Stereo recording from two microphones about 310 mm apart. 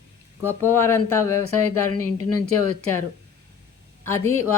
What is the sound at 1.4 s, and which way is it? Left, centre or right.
Speech, left.